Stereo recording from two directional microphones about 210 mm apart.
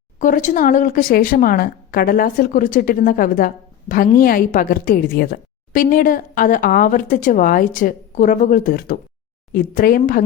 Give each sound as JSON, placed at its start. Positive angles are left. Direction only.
{"t": 0.2, "sound": "speech", "side_deg": 40}